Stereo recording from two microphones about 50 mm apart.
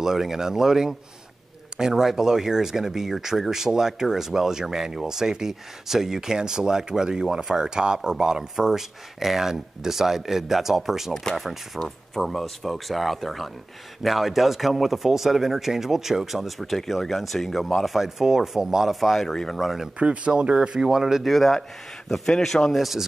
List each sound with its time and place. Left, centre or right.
0.0 s speech: centre
20.0 s speech: right
21.2 s speech: centre